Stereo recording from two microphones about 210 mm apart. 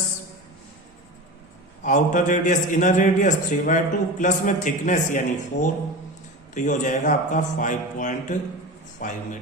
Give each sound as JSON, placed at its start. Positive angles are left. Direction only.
{"t": 1.8, "sound": "a man's voice", "side_deg": 35}